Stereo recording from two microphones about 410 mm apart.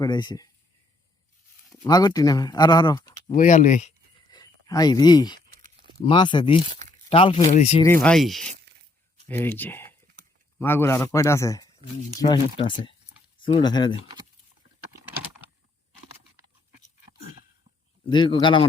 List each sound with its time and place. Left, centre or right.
0.0 s speech: centre
1.7 s speech: centre
5.5 s a sound: centre
6.1 s speech: centre
18.1 s speech: centre